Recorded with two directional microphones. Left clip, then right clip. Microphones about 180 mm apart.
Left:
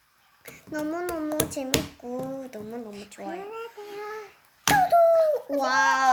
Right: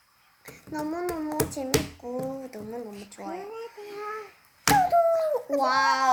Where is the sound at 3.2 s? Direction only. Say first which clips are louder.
Left 1 dB; 90° left.